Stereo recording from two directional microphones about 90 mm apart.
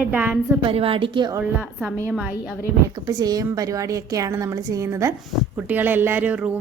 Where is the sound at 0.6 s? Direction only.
85° right.